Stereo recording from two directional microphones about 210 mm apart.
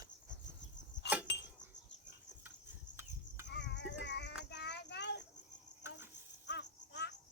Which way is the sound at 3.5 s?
55° left (ahead or behind).